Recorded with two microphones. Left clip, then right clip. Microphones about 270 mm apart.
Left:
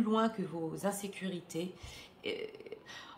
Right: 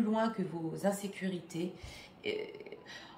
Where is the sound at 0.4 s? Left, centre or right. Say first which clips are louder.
Right 1 dB; centre.